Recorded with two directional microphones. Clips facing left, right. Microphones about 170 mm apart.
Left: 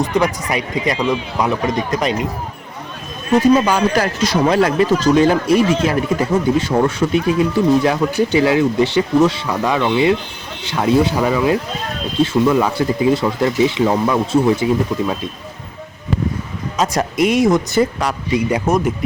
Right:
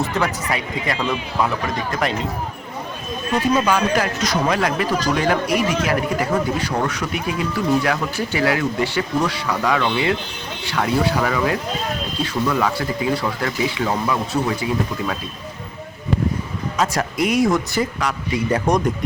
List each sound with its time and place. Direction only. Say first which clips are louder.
0.0 s a man's voice: left 5 dB; 15° left (ahead or behind)
3.7 s a man's voice: left 3 dB; 35° left (ahead or behind)
16.7 s a man's voice: left 4 dB; 20° left (ahead or behind)
18.6 s speech: left 2 dB; 5° left (ahead or behind)